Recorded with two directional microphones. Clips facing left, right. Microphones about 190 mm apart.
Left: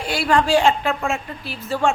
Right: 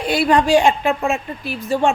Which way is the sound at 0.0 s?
20° right (ahead or behind).